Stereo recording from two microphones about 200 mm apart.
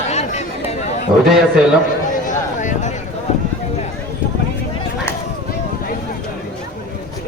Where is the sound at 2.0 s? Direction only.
40° left (ahead or behind).